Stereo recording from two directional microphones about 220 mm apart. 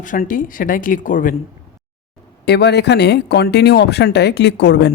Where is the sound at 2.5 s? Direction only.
50° left (ahead or behind).